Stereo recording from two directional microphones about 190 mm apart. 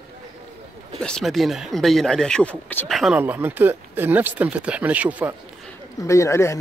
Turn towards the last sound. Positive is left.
turn(degrees=15)  # may be behind; listen again after turning